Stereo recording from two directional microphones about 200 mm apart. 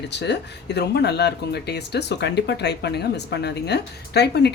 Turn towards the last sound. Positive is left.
turn(degrees=55)  # may be behind; listen again after turning